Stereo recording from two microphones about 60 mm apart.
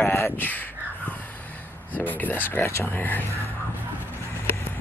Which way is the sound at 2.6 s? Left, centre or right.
Left.